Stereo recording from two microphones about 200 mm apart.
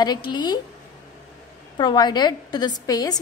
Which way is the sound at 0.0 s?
20° left (ahead or behind).